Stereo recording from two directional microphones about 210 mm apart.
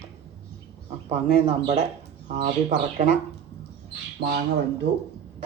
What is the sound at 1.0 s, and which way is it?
Speech, 30° right (ahead or behind).